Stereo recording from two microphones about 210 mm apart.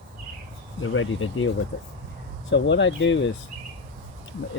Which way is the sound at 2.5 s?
60° left (ahead or behind).